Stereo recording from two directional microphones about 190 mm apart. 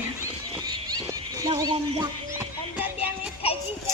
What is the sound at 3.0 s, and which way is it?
Music, 30° left (ahead or behind).